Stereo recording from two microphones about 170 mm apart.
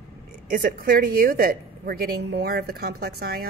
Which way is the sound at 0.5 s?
60° right (ahead or behind).